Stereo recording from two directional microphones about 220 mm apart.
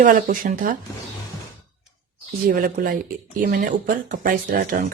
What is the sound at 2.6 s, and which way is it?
A woman's voice, 40° right (ahead or behind).